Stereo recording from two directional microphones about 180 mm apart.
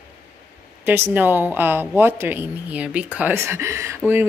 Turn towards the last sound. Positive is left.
turn(degrees=-15)  # may be behind; listen again after turning